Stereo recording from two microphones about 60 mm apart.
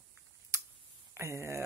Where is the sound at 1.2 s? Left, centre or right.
Right.